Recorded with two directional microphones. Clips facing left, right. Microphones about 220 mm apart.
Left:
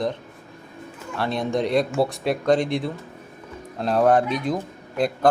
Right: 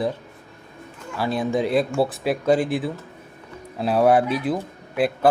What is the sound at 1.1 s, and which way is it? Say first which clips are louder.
Speech: right 1 dB; 5° right (ahead or behind).